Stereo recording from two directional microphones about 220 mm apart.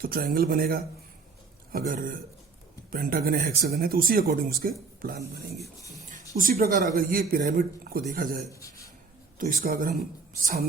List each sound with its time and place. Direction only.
0.0 s speech: 40° right (ahead or behind)
8.5 s a sound: 15° left (ahead or behind)
9.4 s speech: 40° right (ahead or behind)